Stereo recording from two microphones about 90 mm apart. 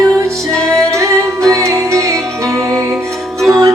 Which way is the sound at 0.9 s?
35° right (ahead or behind).